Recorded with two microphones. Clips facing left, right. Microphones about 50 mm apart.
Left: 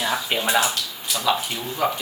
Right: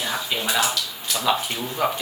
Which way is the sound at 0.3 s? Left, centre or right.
Left.